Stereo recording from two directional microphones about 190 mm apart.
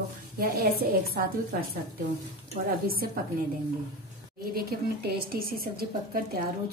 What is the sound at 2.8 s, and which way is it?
Speech, 50° right (ahead or behind).